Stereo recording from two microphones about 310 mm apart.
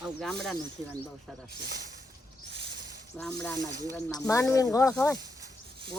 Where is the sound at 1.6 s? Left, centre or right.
Right.